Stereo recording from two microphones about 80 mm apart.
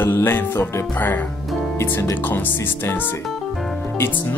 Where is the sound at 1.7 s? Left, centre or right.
Left.